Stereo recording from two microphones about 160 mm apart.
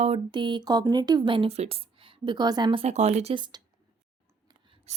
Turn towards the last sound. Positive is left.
turn(degrees=-40)  # may be behind; listen again after turning